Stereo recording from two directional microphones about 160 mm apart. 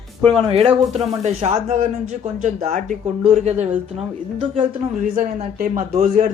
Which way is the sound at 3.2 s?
40° right (ahead or behind).